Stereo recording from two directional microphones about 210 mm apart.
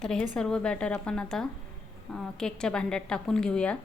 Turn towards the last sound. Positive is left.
turn(degrees=5)  # may be behind; listen again after turning